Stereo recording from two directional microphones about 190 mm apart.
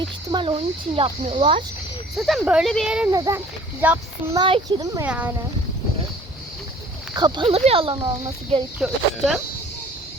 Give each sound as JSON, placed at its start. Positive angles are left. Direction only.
{"t": 0.3, "sound": "speech", "side_deg": -25}
{"t": 2.1, "sound": "speech", "side_deg": 0}
{"t": 3.1, "sound": "a child's voice", "side_deg": -15}
{"t": 4.4, "sound": "speech", "side_deg": -25}
{"t": 5.0, "sound": "a child's voice", "side_deg": -5}
{"t": 7.2, "sound": "speech", "side_deg": -25}
{"t": 8.8, "sound": "speech", "side_deg": 0}